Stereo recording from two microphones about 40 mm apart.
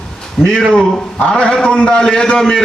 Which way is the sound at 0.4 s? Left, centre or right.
Centre.